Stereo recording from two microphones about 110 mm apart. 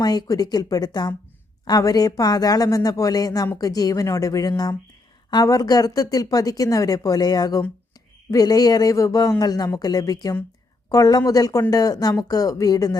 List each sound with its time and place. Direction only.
0.0 s speech: 35° left (ahead or behind)